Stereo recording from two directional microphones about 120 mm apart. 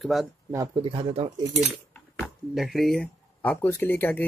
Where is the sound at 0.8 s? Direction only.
50° right (ahead or behind).